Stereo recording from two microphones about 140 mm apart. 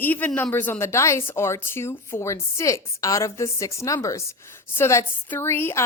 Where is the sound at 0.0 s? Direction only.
10° left (ahead or behind).